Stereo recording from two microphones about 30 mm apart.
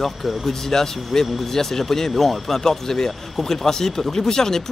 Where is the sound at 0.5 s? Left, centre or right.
Centre.